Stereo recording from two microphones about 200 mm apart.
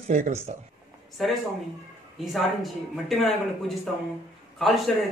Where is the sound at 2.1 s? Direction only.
Centre (ahead or behind).